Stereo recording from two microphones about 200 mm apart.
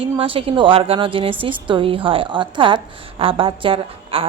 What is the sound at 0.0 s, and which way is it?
A woman's voice, 25° right (ahead or behind).